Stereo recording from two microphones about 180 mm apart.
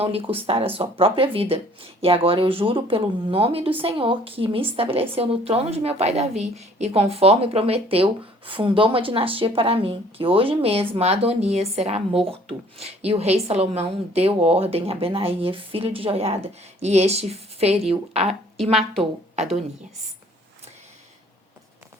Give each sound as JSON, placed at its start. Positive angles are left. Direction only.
{"t": 0.0, "sound": "speech", "side_deg": -30}
{"t": 18.5, "sound": "speech", "side_deg": 0}